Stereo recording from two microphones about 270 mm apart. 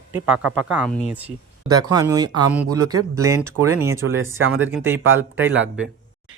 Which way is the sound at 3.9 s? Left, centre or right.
Right.